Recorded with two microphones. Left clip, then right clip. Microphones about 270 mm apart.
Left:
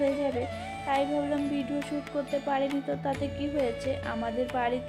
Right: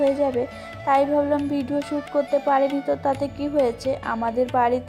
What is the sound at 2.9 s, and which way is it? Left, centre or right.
Speech, centre.